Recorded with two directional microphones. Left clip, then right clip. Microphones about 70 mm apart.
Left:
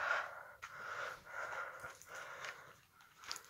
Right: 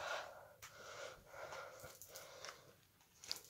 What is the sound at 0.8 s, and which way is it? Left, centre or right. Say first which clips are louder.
Wheeze: left 8 dB; centre.